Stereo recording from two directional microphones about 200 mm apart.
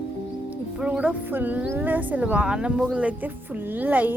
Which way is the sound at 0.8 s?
5° right (ahead or behind).